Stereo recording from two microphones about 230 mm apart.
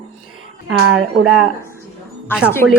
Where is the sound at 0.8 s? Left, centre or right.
Right.